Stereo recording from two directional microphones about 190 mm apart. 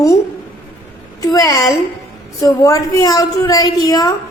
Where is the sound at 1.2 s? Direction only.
20° left (ahead or behind).